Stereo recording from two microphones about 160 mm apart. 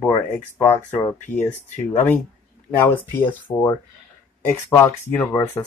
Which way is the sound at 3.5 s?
25° left (ahead or behind).